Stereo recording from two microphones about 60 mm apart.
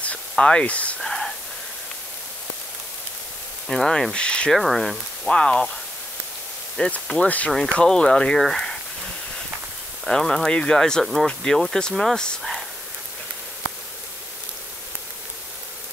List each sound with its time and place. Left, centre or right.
0.0 s speech: centre
1.0 s whispering: centre
3.6 s speech: centre
4.5 s speech: centre
5.3 s speech: centre
6.8 s speech: centre
7.8 s speech: centre
10.0 s speech: centre